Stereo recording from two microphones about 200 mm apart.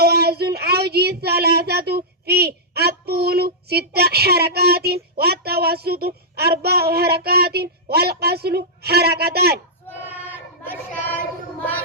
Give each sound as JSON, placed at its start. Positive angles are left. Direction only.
{"t": 0.0, "sound": "child singing", "side_deg": -55}
{"t": 5.1, "sound": "a child's voice", "side_deg": -50}
{"t": 10.2, "sound": "a sound", "side_deg": 10}